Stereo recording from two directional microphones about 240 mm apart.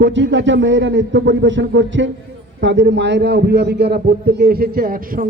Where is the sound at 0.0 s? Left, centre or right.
Right.